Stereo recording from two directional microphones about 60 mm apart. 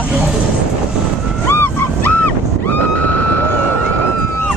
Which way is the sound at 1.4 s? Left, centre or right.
Left.